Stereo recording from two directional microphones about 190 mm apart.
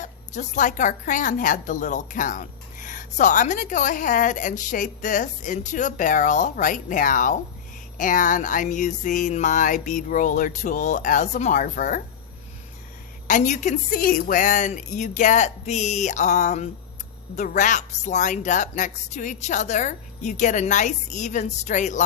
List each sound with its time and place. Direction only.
0.0 s a woman's voice: 40° left (ahead or behind)
13.2 s a woman's voice: 40° left (ahead or behind)